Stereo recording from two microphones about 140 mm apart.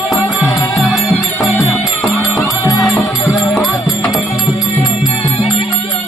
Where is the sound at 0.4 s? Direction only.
20° left (ahead or behind).